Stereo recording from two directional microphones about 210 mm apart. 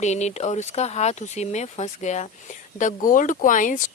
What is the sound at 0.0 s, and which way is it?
Speech, 35° left (ahead or behind).